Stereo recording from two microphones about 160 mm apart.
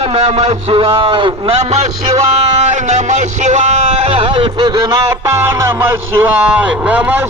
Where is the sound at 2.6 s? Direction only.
50° right (ahead or behind).